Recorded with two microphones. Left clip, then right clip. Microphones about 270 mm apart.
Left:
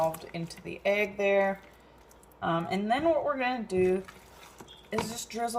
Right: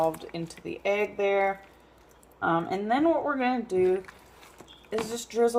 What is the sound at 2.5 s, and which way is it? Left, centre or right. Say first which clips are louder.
Speech: right 2 dB; right.